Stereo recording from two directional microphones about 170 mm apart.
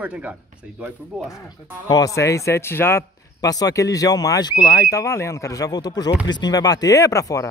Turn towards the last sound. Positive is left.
turn(degrees=20)  # may be behind; listen again after turning